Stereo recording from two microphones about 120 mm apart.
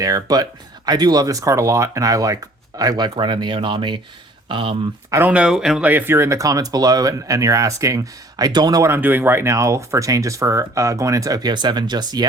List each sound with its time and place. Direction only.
0.0 s speech: 30° right (ahead or behind); by 4.8 s 45° right (ahead or behind)
5.1 s speech: 15° right (ahead or behind)
5.9 s speech: 15° right (ahead or behind); by 8.9 s 35° right (ahead or behind)
8.9 s speech: 15° right (ahead or behind); by 12.3 s 35° right (ahead or behind)